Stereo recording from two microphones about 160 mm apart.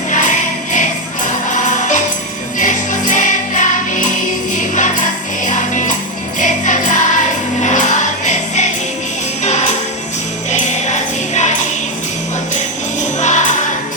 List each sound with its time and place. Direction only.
0.1 s music: 50° left (ahead or behind)
6.4 s jingle bell: 55° left (ahead or behind)
7.6 s music: 50° left (ahead or behind)
13.1 s music: 50° left (ahead or behind)